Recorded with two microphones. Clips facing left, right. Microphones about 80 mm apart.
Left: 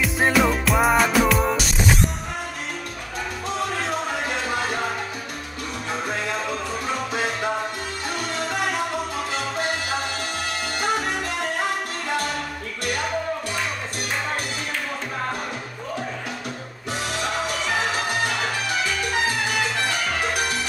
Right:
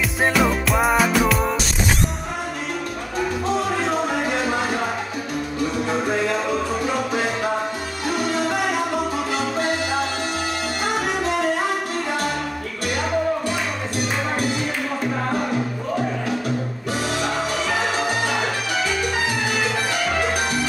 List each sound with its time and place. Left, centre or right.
0.0 s music: centre
4.5 s salsa music: centre